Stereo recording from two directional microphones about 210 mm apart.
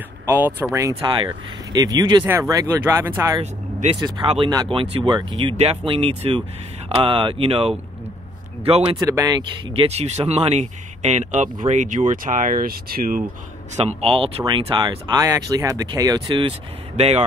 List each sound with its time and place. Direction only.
0.3 s speech: 10° right (ahead or behind); by 8.9 s 30° right (ahead or behind)
9.1 s speech: 15° right (ahead or behind)
9.8 s speech: 30° right (ahead or behind)
14.0 s speech: 25° right (ahead or behind)